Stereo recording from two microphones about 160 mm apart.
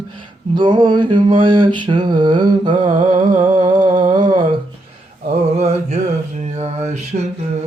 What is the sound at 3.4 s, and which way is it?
Humming, 30° right (ahead or behind).